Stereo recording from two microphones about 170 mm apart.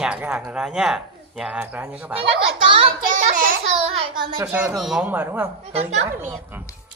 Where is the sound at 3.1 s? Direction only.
50° right (ahead or behind).